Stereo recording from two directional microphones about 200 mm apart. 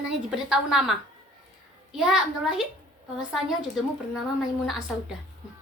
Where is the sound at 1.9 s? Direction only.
Centre (ahead or behind).